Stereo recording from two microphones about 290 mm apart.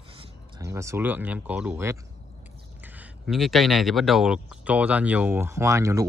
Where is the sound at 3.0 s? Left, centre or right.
Centre.